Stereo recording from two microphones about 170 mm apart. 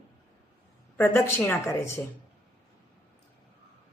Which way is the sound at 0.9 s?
10° left (ahead or behind).